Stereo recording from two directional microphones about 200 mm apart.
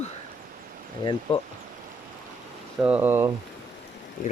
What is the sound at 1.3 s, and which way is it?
Speech, 25° left (ahead or behind).